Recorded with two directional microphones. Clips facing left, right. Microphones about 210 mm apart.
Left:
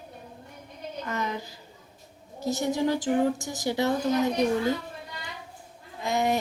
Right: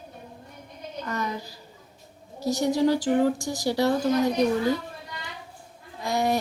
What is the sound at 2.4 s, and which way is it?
Speech, 20° left (ahead or behind).